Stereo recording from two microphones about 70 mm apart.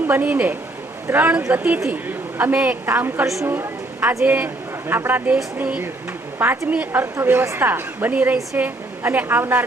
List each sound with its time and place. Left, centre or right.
0.1 s a woman's voice: right
7.0 s a woman's voice: right